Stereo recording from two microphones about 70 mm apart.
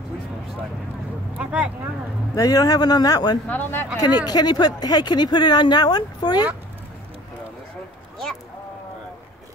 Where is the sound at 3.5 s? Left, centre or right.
Left.